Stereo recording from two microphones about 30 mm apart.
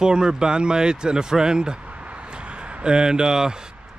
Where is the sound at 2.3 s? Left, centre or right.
Right.